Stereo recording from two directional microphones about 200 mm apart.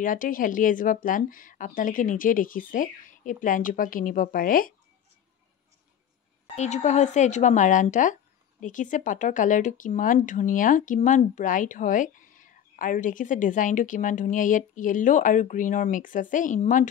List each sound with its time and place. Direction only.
0.0 s speech: 40° left (ahead or behind)
6.5 s speech: 35° left (ahead or behind)